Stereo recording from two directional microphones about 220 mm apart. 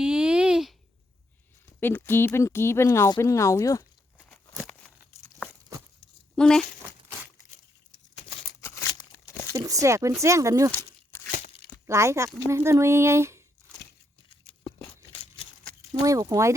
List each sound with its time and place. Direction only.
0.0 s a sound: 5° right (ahead or behind)
1.8 s speech: 10° left (ahead or behind)
4.3 s a sound: 5° left (ahead or behind)
6.3 s speech: 5° left (ahead or behind)
8.6 s crumpling: 15° left (ahead or behind)
9.5 s speech: 15° right (ahead or behind)
10.7 s a sound: 10° left (ahead or behind)
11.3 s tearing: 35° left (ahead or behind)
11.9 s speech: 10° right (ahead or behind)
16.0 s speech: 15° right (ahead or behind)